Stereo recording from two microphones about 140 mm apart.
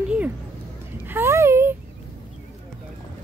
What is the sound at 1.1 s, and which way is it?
Speech, 15° right (ahead or behind).